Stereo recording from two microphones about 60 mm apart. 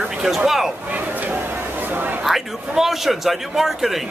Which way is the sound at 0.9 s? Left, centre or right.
Right.